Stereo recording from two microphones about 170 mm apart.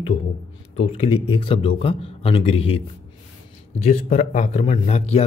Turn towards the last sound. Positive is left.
turn(degrees=40)  # may be behind; listen again after turning